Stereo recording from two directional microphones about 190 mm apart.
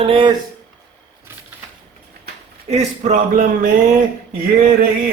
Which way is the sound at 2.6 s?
40° right (ahead or behind).